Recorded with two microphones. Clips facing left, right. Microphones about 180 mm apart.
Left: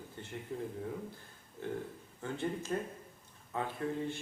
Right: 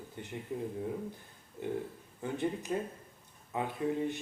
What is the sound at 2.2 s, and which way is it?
A man's voice, 15° right (ahead or behind).